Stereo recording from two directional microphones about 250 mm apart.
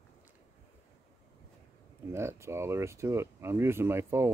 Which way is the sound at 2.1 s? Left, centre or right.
Centre.